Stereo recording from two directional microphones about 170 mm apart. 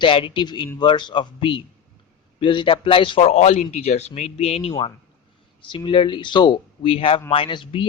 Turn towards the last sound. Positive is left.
turn(degrees=30)  # may be behind; listen again after turning